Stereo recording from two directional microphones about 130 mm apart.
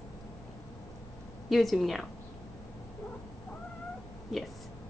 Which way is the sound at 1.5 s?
Centre (ahead or behind).